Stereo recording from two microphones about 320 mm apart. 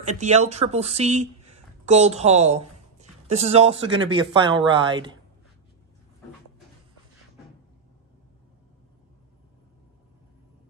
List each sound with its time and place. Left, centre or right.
0.0 s speech: right